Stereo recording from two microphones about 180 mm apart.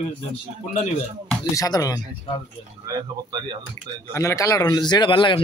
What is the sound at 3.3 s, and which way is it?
Speech, 25° right (ahead or behind).